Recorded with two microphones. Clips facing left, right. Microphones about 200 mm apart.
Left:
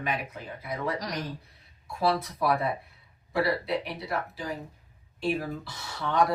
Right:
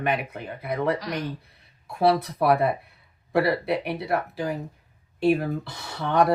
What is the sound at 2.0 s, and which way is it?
Speech, 65° right (ahead or behind).